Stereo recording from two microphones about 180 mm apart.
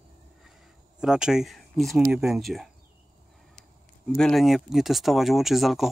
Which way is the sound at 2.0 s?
15° right (ahead or behind).